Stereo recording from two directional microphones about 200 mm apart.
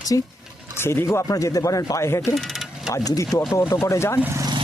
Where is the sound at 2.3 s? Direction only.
Centre (ahead or behind).